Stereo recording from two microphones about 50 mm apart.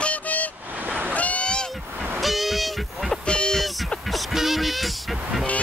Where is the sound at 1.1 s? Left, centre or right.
Left.